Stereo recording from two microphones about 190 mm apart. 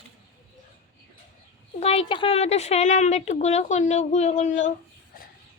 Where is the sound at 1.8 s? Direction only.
30° left (ahead or behind).